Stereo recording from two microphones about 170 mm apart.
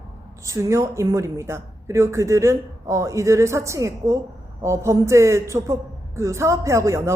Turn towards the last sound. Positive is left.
turn(degrees=-15)  # may be behind; listen again after turning